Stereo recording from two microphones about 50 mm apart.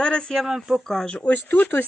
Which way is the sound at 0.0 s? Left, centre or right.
Centre.